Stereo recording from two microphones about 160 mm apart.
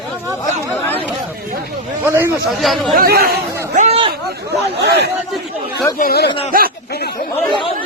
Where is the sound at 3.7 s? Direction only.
50° right (ahead or behind).